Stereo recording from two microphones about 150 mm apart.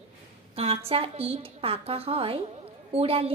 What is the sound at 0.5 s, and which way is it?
A woman's voice, 40° right (ahead or behind).